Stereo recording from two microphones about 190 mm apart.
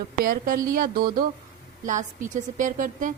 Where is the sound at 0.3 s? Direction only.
45° right (ahead or behind).